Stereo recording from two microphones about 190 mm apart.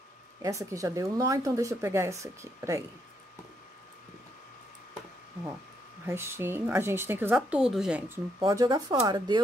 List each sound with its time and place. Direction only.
0.4 s speech: 15° right (ahead or behind)
6.0 s speech: 15° right (ahead or behind)
8.4 s speech: 20° right (ahead or behind)